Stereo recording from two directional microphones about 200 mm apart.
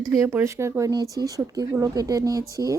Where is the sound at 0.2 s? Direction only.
15° right (ahead or behind).